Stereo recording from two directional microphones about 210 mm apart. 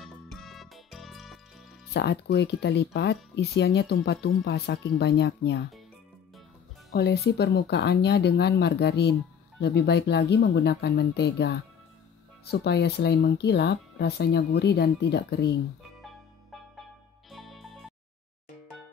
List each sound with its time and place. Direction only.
0.0 s music: centre (ahead or behind)
2.0 s speech: 50° left (ahead or behind)
6.9 s speech: 50° left (ahead or behind)
17.3 s music: centre (ahead or behind)